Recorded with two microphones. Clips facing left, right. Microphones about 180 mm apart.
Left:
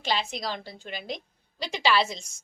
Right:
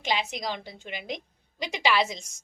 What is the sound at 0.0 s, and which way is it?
A woman's voice, 15° right (ahead or behind).